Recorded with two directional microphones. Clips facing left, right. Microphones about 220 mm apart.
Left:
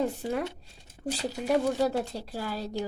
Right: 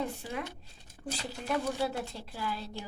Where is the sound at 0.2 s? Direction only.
40° left (ahead or behind).